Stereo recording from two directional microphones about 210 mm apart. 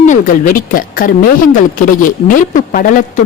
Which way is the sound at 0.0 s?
40° left (ahead or behind).